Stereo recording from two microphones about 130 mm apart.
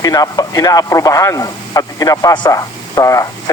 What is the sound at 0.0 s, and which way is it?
Speech, 30° left (ahead or behind).